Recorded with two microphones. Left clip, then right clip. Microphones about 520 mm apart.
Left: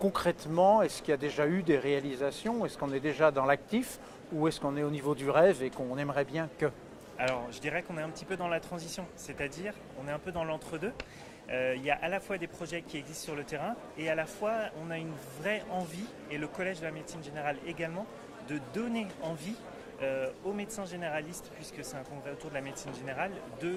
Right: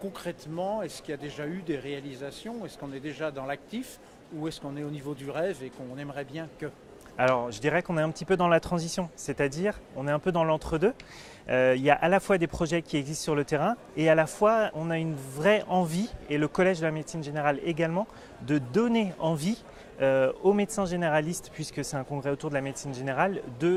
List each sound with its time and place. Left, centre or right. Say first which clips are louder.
0.1 s speech: left 6 dB; left
7.2 s speech: right 8 dB; right